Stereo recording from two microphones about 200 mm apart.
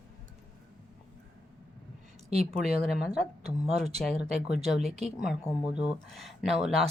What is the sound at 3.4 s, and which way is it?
Speech, 30° right (ahead or behind).